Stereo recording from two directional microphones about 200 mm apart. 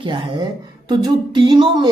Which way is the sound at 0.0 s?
25° right (ahead or behind).